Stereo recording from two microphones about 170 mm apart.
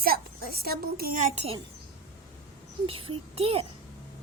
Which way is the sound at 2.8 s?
35° right (ahead or behind).